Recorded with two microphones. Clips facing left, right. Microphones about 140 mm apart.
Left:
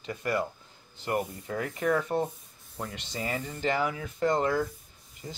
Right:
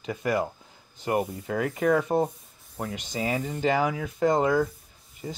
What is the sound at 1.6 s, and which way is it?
Speech, 15° right (ahead or behind).